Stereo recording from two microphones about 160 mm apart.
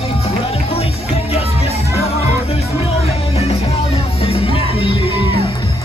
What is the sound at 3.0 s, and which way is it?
Music, 40° left (ahead or behind).